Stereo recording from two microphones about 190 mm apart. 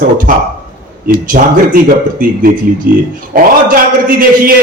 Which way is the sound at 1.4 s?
45° right (ahead or behind).